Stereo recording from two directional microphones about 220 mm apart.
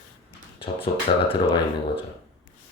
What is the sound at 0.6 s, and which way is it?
Speech, 25° left (ahead or behind).